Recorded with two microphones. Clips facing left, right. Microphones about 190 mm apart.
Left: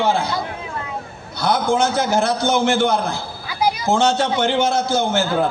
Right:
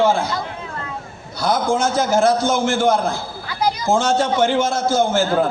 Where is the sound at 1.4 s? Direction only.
60° left (ahead or behind).